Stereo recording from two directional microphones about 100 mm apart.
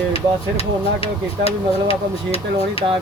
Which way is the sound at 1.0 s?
80° left.